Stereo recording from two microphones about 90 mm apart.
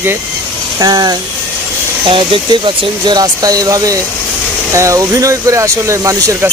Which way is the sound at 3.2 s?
45° right (ahead or behind).